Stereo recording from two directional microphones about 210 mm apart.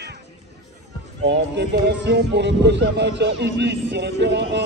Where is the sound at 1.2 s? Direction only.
55° right (ahead or behind).